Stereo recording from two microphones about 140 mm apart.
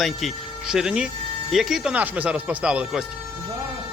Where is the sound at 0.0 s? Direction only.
Centre (ahead or behind).